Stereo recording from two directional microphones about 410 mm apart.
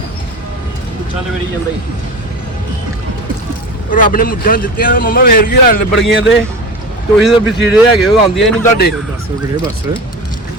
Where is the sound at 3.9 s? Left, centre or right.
Left.